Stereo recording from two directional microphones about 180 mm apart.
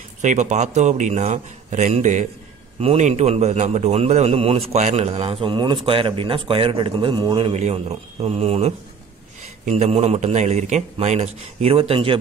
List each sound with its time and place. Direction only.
0.2 s a man's voice: 40° right (ahead or behind)